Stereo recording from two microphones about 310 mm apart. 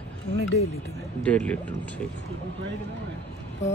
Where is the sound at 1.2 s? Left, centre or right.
Centre.